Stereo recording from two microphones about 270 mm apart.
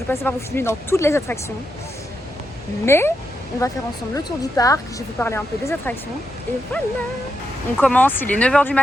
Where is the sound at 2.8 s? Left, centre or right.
Centre.